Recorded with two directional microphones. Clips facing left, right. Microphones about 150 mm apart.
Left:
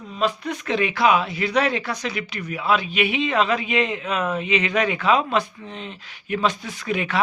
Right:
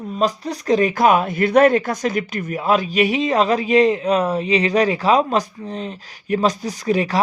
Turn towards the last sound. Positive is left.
turn(degrees=-35)  # may be behind; listen again after turning